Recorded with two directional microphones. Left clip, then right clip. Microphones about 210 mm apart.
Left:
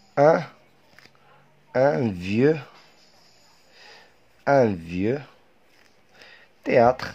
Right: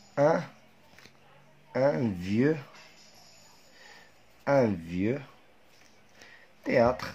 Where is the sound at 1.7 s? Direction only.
45° left (ahead or behind).